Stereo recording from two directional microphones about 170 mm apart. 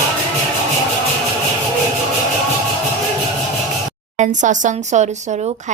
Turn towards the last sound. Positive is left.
turn(degrees=-45)  # may be behind; listen again after turning